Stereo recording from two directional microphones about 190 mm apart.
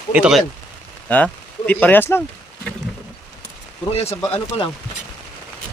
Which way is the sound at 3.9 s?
35° left (ahead or behind).